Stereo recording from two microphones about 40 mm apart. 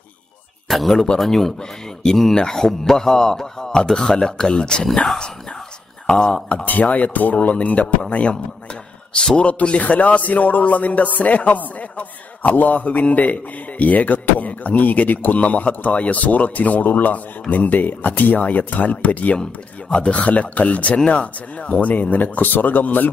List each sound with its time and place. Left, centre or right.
0.7 s speech: centre
0.9 s a man's voice: centre
4.9 s a man's voice: centre
6.0 s speech: left
6.6 s a man's voice: left
9.4 s a man's voice: left
21.9 s speech: left